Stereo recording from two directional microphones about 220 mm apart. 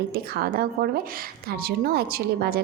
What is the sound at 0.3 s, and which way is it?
A woman's voice, 45° right (ahead or behind).